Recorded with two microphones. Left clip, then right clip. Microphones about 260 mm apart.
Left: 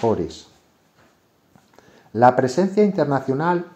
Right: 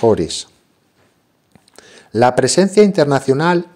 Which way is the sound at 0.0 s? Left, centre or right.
Right.